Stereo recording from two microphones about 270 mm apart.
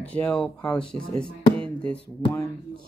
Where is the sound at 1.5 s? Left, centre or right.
Centre.